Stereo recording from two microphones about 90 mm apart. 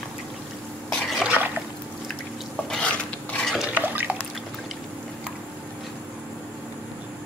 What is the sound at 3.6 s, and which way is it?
Drip, 20° right (ahead or behind).